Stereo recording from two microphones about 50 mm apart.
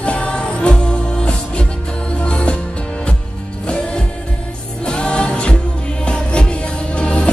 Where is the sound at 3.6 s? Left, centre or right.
Centre.